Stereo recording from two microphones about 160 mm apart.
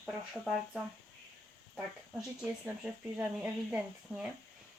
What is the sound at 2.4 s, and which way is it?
Speech, 5° right (ahead or behind).